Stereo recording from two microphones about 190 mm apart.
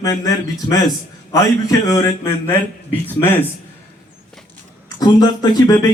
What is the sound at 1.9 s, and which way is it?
Speech, 15° left (ahead or behind).